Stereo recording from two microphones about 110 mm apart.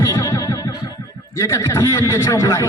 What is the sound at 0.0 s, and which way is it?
Music, 30° left (ahead or behind).